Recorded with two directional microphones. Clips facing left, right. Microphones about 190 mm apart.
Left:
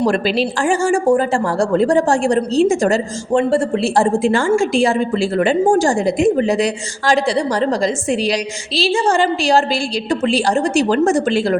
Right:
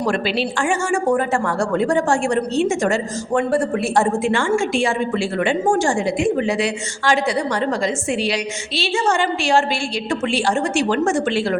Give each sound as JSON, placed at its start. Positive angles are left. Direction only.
{"t": 0.0, "sound": "a woman's voice", "side_deg": 35}